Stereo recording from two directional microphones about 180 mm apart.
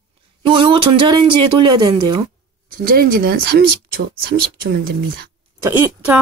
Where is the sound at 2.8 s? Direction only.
55° right (ahead or behind).